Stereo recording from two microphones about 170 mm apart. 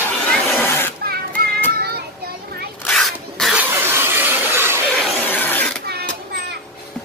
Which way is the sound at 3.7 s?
15° right (ahead or behind).